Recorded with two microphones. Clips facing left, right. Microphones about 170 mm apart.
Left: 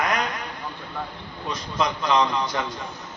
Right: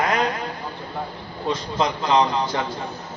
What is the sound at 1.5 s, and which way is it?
A man's voice, 30° right (ahead or behind).